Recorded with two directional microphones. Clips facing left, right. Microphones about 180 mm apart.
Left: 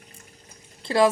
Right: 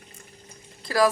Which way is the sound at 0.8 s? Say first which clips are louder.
Left 2 dB; 25° left (ahead or behind).